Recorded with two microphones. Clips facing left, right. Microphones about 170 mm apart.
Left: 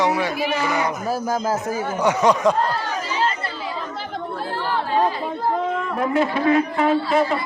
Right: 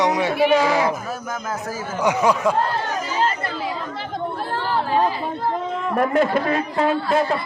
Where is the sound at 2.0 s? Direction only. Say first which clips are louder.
Left 1 dB; 10° right (ahead or behind).